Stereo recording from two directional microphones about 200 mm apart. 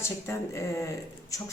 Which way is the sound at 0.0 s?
15° left (ahead or behind).